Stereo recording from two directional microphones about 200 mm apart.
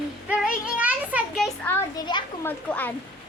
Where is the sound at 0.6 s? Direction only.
5° right (ahead or behind).